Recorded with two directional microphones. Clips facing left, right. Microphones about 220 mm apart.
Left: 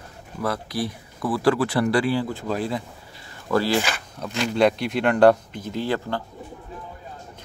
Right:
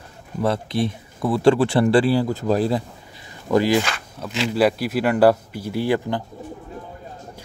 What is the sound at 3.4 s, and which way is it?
Speech, 15° right (ahead or behind).